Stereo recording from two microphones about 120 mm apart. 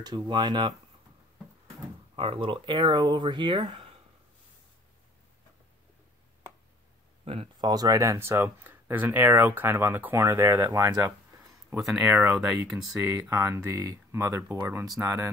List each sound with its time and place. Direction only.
0.0 s speech: 40° right (ahead or behind)
2.1 s speech: 50° right (ahead or behind)
7.3 s speech: 55° right (ahead or behind)
7.6 s speech: 30° right (ahead or behind)
12.0 s speech: 10° right (ahead or behind)
13.3 s speech: 25° right (ahead or behind)